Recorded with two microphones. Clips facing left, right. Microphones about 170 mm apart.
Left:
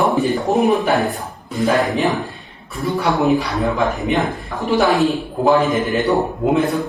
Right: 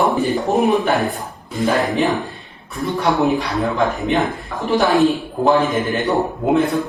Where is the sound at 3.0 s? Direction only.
Centre (ahead or behind).